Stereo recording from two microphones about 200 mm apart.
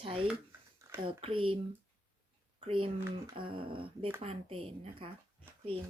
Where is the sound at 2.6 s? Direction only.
25° right (ahead or behind).